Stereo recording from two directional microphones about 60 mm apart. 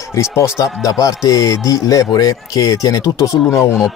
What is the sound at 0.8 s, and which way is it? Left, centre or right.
Speech, left.